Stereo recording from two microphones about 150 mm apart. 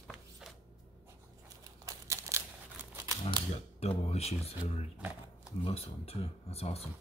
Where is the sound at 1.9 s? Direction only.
20° right (ahead or behind).